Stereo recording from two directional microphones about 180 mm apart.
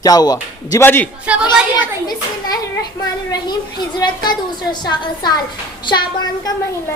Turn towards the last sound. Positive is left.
turn(degrees=25)  # may be behind; listen again after turning